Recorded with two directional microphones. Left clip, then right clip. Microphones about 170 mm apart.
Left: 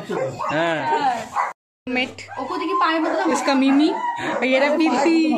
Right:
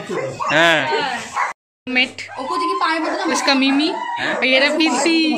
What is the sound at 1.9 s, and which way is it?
Speech, 10° left (ahead or behind).